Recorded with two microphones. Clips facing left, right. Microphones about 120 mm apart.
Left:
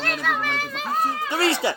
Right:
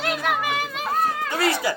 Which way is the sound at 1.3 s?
30° left (ahead or behind).